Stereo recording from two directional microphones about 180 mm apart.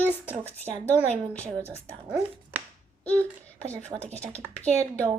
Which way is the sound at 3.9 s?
40° right (ahead or behind).